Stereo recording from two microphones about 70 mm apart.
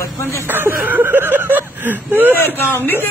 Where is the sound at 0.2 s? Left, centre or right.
Left.